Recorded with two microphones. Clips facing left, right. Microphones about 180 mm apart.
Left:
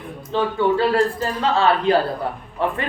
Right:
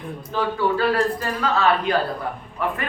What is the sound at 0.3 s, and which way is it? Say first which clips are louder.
Speech: left 3 dB; 25° left (ahead or behind).